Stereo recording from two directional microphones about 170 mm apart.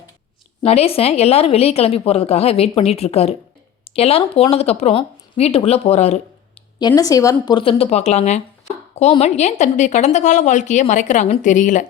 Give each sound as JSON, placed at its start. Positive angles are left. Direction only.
{"t": 0.6, "sound": "a woman's voice", "side_deg": 35}
{"t": 6.7, "sound": "a woman's voice", "side_deg": 25}